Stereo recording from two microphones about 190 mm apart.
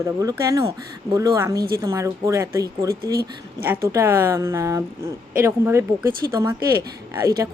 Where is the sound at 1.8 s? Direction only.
15° right (ahead or behind).